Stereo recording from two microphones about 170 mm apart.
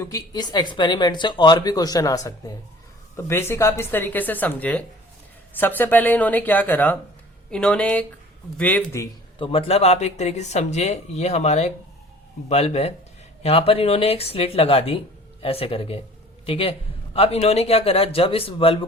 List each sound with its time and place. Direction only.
0.0 s speech: 20° left (ahead or behind)
9.4 s speech: 35° left (ahead or behind)